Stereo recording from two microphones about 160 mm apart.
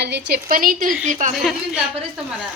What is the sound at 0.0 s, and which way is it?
A woman's voice, 90° right.